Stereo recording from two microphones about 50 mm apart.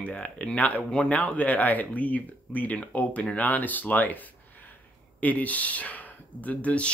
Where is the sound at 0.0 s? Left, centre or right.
Left.